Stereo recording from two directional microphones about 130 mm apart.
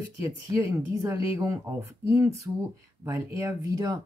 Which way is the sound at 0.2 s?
20° right (ahead or behind).